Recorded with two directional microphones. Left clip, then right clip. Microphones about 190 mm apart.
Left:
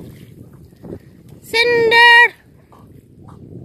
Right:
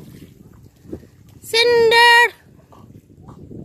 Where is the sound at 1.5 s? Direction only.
20° right (ahead or behind).